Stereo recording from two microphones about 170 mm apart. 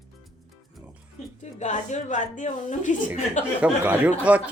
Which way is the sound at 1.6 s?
45° left (ahead or behind).